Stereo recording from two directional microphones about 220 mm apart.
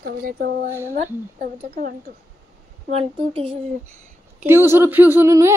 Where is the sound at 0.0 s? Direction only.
40° right (ahead or behind).